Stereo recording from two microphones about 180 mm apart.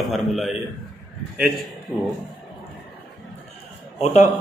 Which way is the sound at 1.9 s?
10° left (ahead or behind).